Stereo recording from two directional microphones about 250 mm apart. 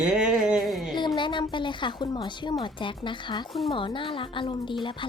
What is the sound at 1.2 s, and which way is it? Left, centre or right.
Speech, centre.